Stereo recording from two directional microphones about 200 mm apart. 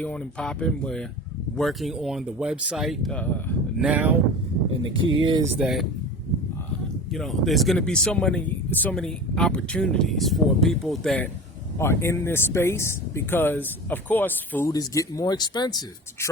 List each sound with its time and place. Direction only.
0.0 s speech: 5° left (ahead or behind)
3.8 s speech: 10° right (ahead or behind)
4.9 s speech: 75° right (ahead or behind)
5.2 s speech: 20° right (ahead or behind)
5.5 s speech: centre (ahead or behind)
7.1 s speech: centre (ahead or behind)
11.8 s speech: 15° left (ahead or behind)